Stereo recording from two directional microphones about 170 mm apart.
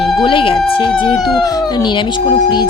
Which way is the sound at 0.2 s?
30° left (ahead or behind).